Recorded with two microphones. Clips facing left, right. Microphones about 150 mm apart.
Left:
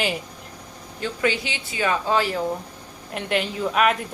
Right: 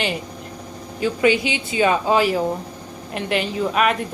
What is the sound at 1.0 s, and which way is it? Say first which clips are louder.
Speech: right 6 dB; 15° right (ahead or behind).